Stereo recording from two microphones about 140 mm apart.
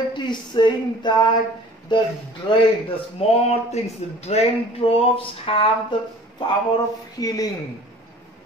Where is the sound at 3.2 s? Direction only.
45° left (ahead or behind).